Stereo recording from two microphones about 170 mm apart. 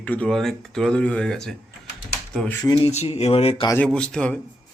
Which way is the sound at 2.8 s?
35° left (ahead or behind).